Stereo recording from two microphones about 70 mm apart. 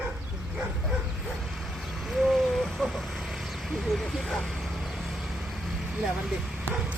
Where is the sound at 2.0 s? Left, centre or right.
Centre.